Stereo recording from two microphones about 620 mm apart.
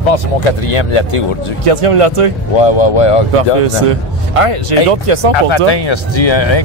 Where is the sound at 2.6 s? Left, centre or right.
Left.